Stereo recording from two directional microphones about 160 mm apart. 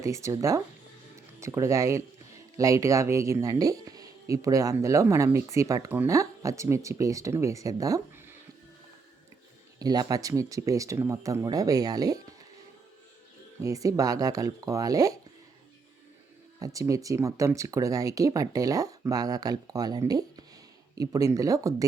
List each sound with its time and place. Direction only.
0.0 s speech: 20° right (ahead or behind)
9.7 s speech: 25° right (ahead or behind)
13.6 s speech: 20° right (ahead or behind)
16.6 s speech: 20° right (ahead or behind)